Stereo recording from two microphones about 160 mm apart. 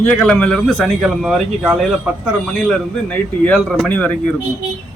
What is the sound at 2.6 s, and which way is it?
A man's voice, 10° left (ahead or behind).